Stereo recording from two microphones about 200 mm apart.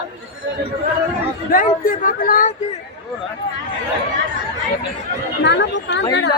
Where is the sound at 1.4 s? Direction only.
45° left (ahead or behind).